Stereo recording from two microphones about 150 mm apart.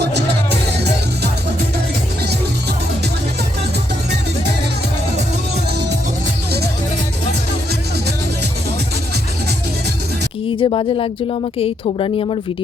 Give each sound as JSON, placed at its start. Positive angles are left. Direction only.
{"t": 10.5, "sound": "speech", "side_deg": 35}